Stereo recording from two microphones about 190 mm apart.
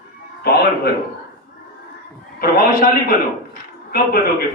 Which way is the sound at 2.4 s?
50° left (ahead or behind).